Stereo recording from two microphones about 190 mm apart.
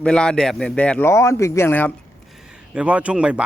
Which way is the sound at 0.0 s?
5° left (ahead or behind).